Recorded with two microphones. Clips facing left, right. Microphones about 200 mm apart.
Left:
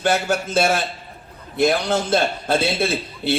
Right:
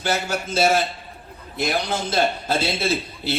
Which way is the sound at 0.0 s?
55° left (ahead or behind).